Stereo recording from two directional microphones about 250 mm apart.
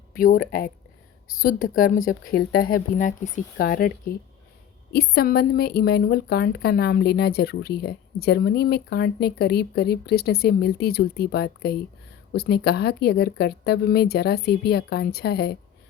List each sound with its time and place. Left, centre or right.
0.2 s speech: left